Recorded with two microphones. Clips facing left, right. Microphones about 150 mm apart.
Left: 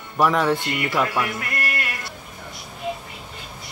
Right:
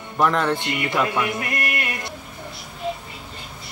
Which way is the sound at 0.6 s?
20° right (ahead or behind).